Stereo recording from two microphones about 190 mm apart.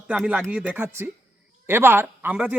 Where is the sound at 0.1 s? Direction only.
5° right (ahead or behind).